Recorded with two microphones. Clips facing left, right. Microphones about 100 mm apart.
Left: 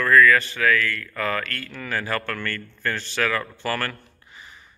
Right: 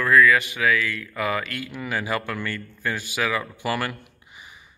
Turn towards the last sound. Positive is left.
turn(degrees=-15)  # may be behind; listen again after turning